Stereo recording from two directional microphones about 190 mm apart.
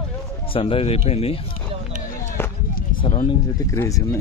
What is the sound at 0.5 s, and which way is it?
Speech, 30° left (ahead or behind).